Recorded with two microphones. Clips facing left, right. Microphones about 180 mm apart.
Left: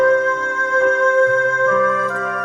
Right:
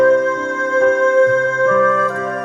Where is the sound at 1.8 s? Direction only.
50° right (ahead or behind).